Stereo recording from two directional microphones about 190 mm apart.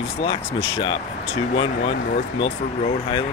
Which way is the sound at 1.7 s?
45° left (ahead or behind).